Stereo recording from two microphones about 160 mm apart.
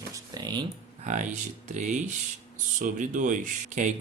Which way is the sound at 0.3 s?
25° right (ahead or behind).